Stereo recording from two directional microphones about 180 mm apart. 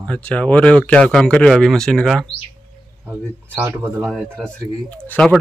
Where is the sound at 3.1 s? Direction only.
10° right (ahead or behind).